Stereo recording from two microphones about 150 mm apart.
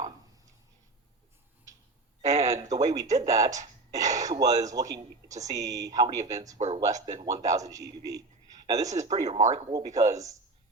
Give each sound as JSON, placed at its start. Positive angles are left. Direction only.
{"t": 2.4, "sound": "a man's voice", "side_deg": -20}